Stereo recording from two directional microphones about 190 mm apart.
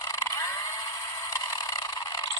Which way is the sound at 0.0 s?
20° left (ahead or behind).